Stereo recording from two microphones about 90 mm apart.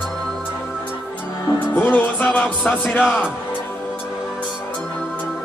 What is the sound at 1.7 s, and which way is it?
Music, 20° left (ahead or behind).